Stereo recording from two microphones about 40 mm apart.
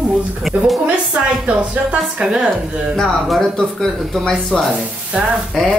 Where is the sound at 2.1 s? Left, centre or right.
Right.